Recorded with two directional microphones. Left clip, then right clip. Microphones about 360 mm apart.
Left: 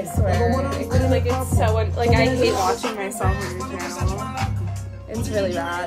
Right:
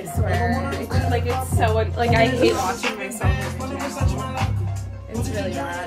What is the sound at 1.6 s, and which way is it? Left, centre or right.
Speech, centre.